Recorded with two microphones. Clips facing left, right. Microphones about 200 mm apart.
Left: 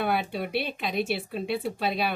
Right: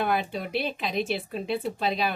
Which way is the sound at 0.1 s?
5° left (ahead or behind).